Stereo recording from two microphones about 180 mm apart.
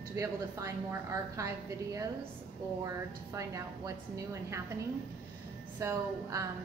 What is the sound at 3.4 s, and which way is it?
A woman's voice, 15° right (ahead or behind).